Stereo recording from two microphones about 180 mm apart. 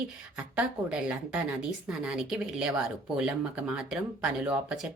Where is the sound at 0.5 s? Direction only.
5° right (ahead or behind).